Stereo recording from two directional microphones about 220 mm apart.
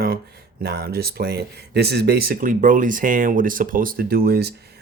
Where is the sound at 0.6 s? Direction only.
45° right (ahead or behind).